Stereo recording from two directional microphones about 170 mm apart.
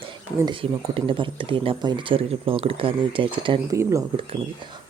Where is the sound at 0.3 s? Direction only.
25° right (ahead or behind).